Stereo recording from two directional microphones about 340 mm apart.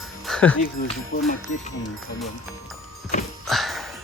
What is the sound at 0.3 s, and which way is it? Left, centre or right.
Music, centre.